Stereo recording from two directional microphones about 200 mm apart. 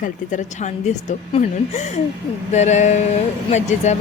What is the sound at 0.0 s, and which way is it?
A woman's voice, 40° left (ahead or behind).